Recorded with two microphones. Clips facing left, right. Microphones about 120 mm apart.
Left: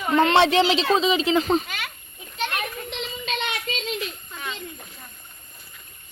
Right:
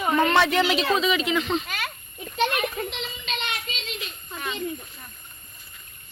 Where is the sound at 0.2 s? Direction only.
30° left (ahead or behind).